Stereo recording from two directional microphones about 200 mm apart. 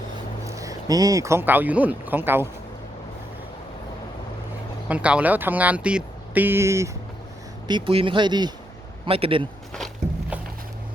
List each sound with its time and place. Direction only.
0.4 s speech: 15° right (ahead or behind)
4.9 s a man's voice: 5° right (ahead or behind); by 9.5 s 25° right (ahead or behind)
9.7 s walk: 5° right (ahead or behind)